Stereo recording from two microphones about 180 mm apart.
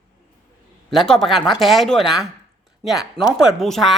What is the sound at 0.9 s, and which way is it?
Speech, centre (ahead or behind).